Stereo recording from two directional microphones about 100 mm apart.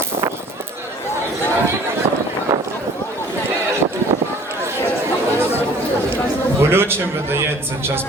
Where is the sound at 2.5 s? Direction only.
25° right (ahead or behind).